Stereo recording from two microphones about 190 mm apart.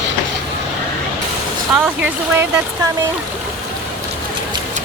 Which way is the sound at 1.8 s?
10° right (ahead or behind).